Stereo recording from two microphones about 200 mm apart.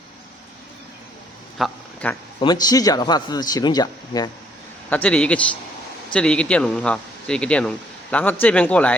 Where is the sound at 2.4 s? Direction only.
20° left (ahead or behind).